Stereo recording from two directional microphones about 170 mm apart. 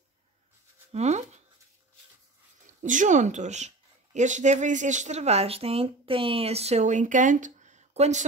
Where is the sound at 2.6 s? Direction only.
50° right (ahead or behind).